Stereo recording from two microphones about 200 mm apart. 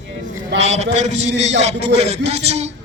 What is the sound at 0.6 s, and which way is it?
A man's voice, 35° right (ahead or behind).